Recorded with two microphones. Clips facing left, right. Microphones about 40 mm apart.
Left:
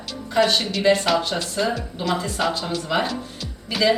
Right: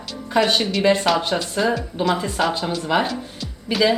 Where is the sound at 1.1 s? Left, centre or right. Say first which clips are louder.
Right 2 dB; centre.